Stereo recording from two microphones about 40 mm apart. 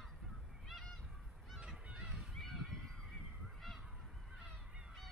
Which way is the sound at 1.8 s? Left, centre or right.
Right.